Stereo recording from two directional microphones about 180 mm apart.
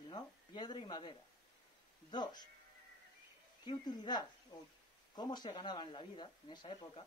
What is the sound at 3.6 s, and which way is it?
Speech, 25° left (ahead or behind).